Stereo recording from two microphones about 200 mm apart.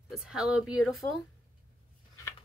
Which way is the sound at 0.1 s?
Centre (ahead or behind).